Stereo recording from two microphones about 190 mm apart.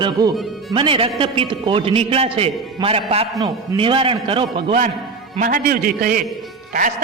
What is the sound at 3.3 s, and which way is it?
A man's voice, 20° right (ahead or behind).